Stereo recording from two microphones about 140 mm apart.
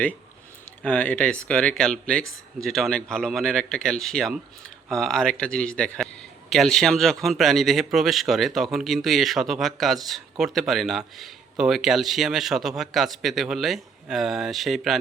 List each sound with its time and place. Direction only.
0.8 s speech: 10° left (ahead or behind)